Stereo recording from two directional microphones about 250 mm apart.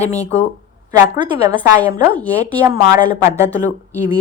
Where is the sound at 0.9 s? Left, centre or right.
Centre.